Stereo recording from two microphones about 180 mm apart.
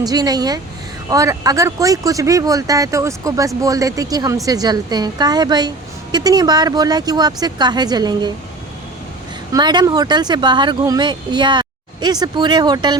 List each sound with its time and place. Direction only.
0.0 s a woman's voice: 20° right (ahead or behind)
9.5 s a woman's voice: 25° right (ahead or behind)